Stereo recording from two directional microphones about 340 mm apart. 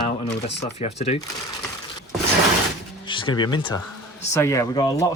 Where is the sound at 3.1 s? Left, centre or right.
Centre.